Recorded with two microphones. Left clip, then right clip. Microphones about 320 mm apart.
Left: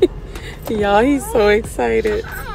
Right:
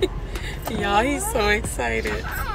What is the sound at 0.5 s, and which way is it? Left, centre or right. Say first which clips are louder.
Speech: left 8 dB; left.